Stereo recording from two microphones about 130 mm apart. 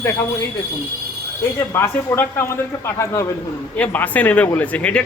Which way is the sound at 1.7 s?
20° left (ahead or behind).